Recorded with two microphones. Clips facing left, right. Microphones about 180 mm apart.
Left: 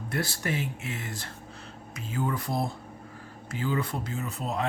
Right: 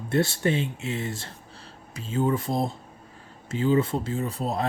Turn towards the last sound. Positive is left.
turn(degrees=-35)  # may be behind; listen again after turning